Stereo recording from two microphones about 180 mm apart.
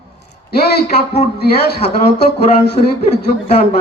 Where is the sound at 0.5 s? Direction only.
60° left (ahead or behind).